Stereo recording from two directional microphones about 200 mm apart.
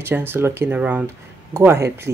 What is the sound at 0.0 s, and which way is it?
Speech, 10° right (ahead or behind).